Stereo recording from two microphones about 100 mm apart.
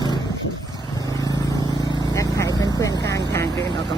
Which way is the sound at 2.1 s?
30° left (ahead or behind).